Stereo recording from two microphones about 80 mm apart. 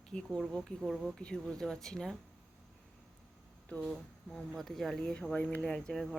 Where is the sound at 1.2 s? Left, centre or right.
Centre.